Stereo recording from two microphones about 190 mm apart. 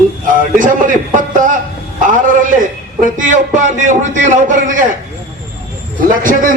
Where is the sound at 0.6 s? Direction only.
45° right (ahead or behind).